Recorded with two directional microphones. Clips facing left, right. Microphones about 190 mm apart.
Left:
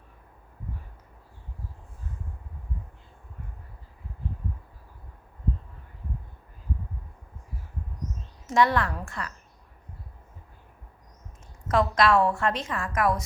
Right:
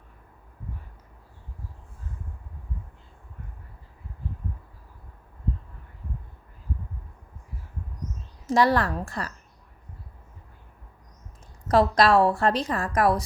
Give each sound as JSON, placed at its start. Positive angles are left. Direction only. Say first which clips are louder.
{"t": 8.4, "sound": "a woman's voice", "louder": "right 2 dB", "side_deg": -35}
{"t": 11.7, "sound": "a woman's voice", "louder": "right 3 dB", "side_deg": -35}